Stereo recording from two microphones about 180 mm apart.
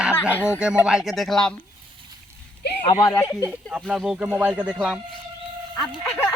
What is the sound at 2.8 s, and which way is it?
Speech, 30° left (ahead or behind).